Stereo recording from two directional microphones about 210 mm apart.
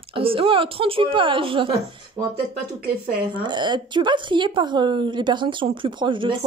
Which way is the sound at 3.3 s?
20° right (ahead or behind).